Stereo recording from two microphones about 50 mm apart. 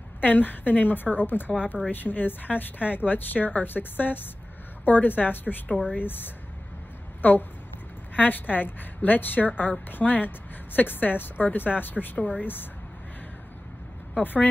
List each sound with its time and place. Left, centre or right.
0.2 s a woman's voice: left
5.7 s speech: centre
5.9 s a woman's voice: left
14.2 s a woman's voice: left